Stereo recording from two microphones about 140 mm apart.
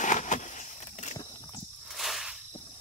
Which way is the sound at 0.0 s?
60° left (ahead or behind).